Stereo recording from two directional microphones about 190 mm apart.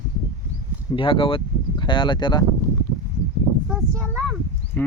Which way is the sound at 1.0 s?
25° left (ahead or behind).